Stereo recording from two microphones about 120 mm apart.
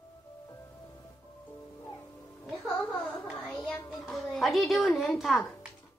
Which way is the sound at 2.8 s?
Centre (ahead or behind).